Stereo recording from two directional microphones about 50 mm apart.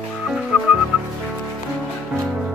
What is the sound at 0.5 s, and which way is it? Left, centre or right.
Music, right.